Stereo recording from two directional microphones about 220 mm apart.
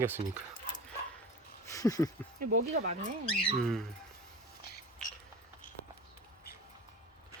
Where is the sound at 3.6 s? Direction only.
Centre (ahead or behind).